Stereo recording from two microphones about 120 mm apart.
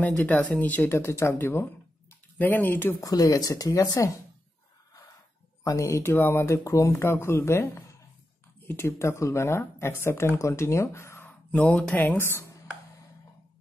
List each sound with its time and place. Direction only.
0.0 s speech: 15° left (ahead or behind)
3.0 s speech: 30° left (ahead or behind)
5.6 s speech: 25° left (ahead or behind)